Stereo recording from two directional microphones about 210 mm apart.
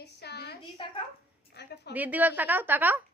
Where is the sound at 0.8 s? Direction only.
25° left (ahead or behind).